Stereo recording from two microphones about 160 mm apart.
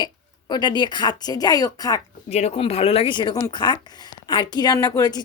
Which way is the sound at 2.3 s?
40° left (ahead or behind).